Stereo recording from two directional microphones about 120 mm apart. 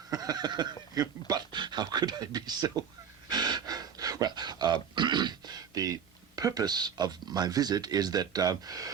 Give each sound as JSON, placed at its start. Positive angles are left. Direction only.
{"t": 0.1, "sound": "speech", "side_deg": -30}
{"t": 3.2, "sound": "gasp", "side_deg": -35}